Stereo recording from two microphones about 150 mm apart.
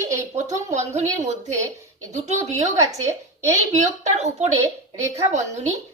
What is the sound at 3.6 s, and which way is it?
A woman's voice, 50° right (ahead or behind).